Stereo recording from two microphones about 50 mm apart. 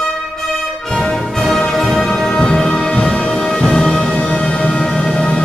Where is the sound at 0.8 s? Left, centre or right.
Centre.